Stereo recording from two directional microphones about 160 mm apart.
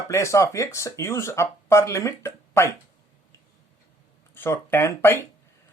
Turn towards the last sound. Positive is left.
turn(degrees=15)  # may be behind; listen again after turning